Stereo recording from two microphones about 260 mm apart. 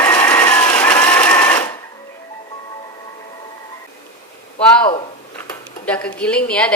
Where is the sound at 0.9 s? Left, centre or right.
Centre.